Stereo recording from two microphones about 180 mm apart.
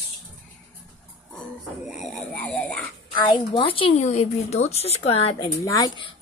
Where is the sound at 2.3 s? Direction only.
10° left (ahead or behind).